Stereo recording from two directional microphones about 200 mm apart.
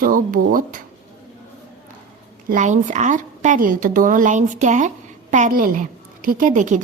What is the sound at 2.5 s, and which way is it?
A woman's voice, 40° right (ahead or behind).